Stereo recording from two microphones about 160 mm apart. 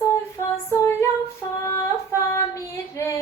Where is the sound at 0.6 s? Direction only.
15° left (ahead or behind).